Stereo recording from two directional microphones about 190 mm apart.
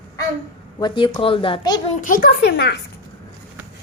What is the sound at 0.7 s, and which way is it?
A woman's voice, 25° left (ahead or behind).